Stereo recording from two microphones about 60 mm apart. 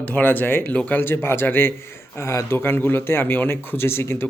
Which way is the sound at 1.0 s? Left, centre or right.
Left.